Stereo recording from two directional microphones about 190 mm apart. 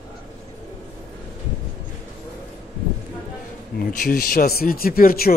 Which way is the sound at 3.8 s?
45° left (ahead or behind).